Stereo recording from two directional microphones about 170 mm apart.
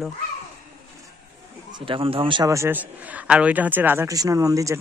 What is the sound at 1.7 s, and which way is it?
A man's voice, 30° right (ahead or behind).